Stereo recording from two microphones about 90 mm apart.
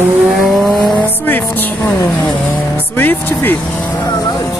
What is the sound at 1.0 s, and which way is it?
Speech, 20° left (ahead or behind).